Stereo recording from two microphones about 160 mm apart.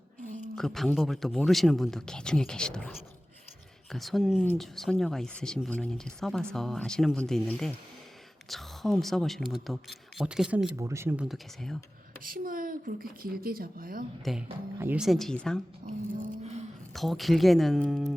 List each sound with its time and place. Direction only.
0.5 s speech: centre (ahead or behind)
3.9 s speech: centre (ahead or behind)
10.8 s speech: 15° right (ahead or behind)
11.3 s speech: centre (ahead or behind)
12.2 s speech: 60° right (ahead or behind)
14.3 s speech: centre (ahead or behind)
14.8 s speech: 15° right (ahead or behind)
15.0 s speech: centre (ahead or behind)
16.4 s a sound: 40° right (ahead or behind)
16.9 s speech: centre (ahead or behind)